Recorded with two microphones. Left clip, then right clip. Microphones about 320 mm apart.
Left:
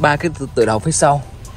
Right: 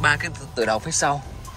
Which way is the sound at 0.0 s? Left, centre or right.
Centre.